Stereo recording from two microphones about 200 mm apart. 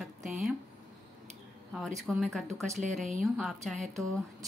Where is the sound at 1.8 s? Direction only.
Centre (ahead or behind).